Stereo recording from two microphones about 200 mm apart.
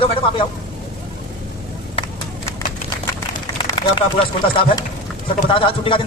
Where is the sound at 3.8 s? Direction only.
25° left (ahead or behind).